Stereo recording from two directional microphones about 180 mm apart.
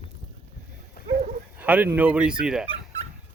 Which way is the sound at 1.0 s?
45° right (ahead or behind).